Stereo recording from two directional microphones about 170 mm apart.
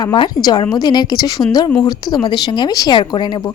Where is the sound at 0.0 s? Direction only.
25° left (ahead or behind).